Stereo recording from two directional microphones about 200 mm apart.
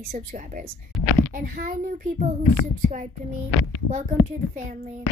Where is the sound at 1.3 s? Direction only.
45° right (ahead or behind).